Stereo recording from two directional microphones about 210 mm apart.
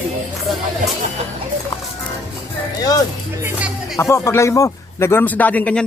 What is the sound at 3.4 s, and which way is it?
Music, 10° right (ahead or behind).